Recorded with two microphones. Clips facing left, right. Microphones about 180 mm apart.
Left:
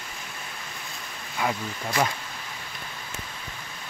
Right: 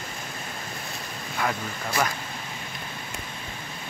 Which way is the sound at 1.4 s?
15° left (ahead or behind).